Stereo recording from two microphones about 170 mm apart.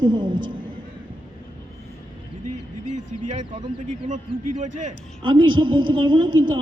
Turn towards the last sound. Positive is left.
turn(degrees=-30)  # may be behind; listen again after turning